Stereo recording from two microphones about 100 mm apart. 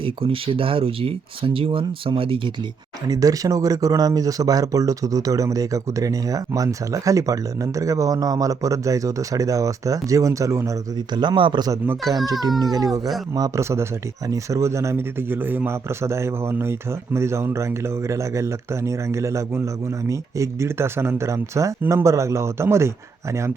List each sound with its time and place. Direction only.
0.0 s speech: 65° right (ahead or behind)
3.1 s speech: 40° right (ahead or behind)
11.1 s a man's voice: 50° right (ahead or behind)
12.2 s speech: 40° right (ahead or behind)